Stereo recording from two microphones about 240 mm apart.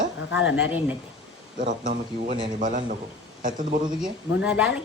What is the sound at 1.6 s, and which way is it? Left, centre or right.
Speech, right.